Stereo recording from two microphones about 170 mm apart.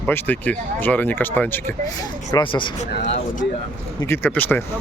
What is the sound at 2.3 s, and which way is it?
Speech, 25° left (ahead or behind).